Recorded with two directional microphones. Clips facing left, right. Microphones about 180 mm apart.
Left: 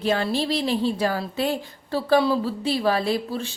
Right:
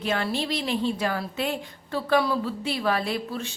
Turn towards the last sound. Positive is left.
turn(degrees=30)  # may be behind; listen again after turning